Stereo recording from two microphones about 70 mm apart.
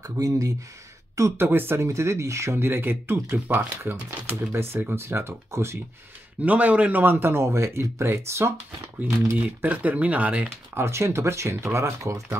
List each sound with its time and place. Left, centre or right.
0.0 s a woman's voice: right
1.5 s speech: right
1.9 s speech: right
6.4 s speech: right
9.6 s speech: right
10.7 s speech: right